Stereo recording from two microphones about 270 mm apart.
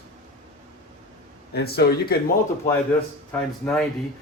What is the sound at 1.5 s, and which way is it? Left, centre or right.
Speech, left.